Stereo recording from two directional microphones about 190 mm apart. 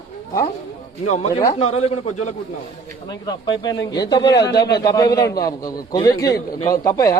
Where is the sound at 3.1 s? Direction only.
20° left (ahead or behind).